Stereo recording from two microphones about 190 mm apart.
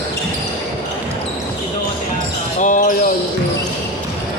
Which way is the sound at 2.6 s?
45° left (ahead or behind).